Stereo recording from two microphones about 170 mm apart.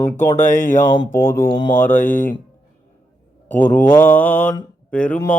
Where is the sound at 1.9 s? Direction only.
50° left (ahead or behind).